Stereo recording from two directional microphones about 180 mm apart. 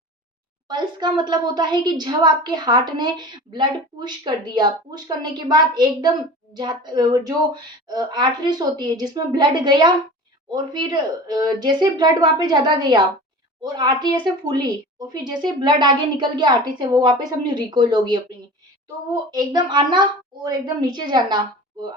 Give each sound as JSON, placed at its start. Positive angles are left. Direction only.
{"t": 0.7, "sound": "a woman's voice", "side_deg": -25}